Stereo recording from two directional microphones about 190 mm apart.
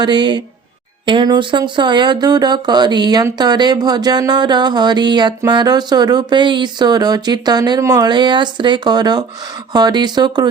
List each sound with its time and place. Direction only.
0.0 s speech: 25° right (ahead or behind)